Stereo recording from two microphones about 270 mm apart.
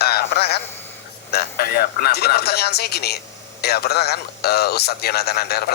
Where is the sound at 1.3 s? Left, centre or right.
Left.